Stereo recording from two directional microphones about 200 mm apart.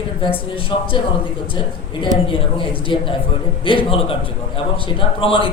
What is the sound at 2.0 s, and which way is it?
A man's voice, 25° left (ahead or behind).